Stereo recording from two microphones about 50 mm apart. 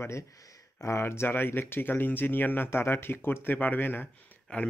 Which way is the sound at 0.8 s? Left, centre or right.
Left.